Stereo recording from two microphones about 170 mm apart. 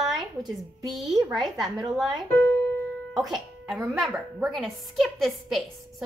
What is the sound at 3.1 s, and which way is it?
A woman's voice, centre (ahead or behind).